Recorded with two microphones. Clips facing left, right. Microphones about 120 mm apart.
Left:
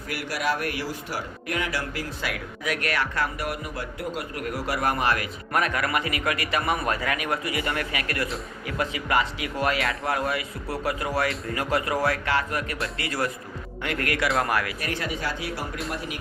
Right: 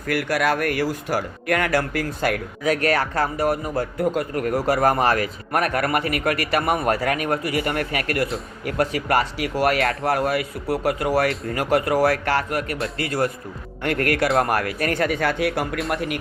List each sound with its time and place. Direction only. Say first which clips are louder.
0.1 s speech: right 7 dB; 55° right (ahead or behind)